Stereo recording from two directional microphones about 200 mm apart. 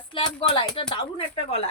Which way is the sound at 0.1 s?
25° left (ahead or behind).